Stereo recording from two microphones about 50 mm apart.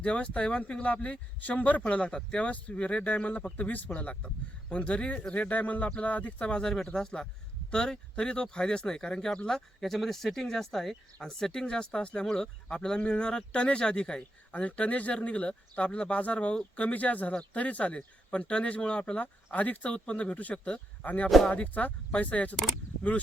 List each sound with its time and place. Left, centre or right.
0.0 s speech: left
1.8 s speech: left
9.8 s speech: centre
14.2 s speech: left